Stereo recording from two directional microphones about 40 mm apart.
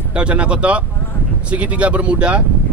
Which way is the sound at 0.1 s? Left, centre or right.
Right.